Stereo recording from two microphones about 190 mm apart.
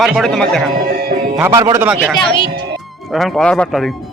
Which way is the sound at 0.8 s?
50° right (ahead or behind).